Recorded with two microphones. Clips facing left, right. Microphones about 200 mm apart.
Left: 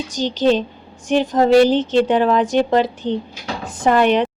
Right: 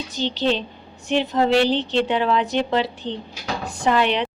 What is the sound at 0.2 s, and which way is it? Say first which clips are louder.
A woman's voice: left 6 dB; 45° left (ahead or behind).